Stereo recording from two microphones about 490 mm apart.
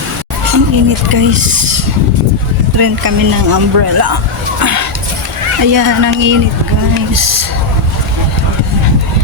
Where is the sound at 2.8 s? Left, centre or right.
Right.